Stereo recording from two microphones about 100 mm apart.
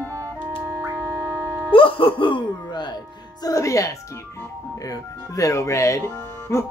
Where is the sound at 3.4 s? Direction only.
35° left (ahead or behind).